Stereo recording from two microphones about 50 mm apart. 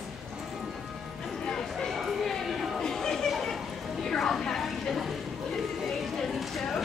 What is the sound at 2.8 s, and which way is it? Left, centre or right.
Chatter, centre.